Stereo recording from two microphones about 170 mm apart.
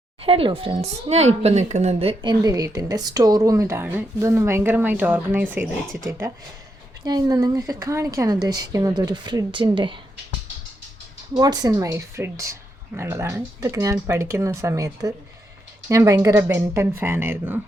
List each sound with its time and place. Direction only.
0.2 s speech: 35° right (ahead or behind)
2.3 s a woman's voice: 20° right (ahead or behind)
11.3 s speech: 20° right (ahead or behind)